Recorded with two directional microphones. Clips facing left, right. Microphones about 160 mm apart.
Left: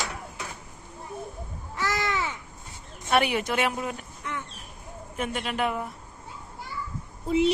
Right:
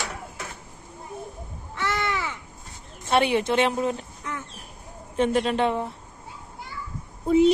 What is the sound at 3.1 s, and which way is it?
A woman's voice, 25° right (ahead or behind).